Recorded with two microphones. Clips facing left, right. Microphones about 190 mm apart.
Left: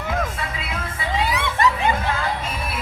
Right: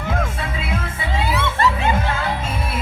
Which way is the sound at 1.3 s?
15° left (ahead or behind).